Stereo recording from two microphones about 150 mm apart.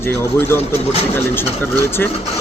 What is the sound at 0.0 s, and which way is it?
Speech, 15° left (ahead or behind).